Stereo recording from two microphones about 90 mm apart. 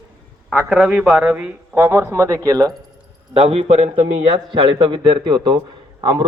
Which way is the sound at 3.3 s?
90° right.